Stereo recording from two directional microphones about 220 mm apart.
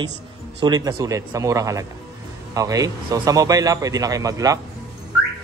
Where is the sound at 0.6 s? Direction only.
15° right (ahead or behind).